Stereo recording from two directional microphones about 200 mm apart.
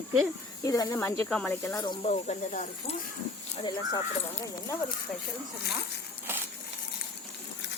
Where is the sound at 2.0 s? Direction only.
35° left (ahead or behind).